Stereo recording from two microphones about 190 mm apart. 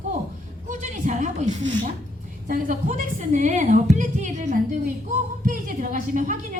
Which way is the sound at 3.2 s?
40° right (ahead or behind).